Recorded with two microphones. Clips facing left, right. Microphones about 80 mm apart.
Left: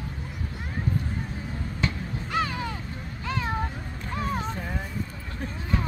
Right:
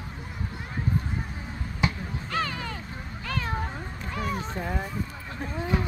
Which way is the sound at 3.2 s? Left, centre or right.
Left.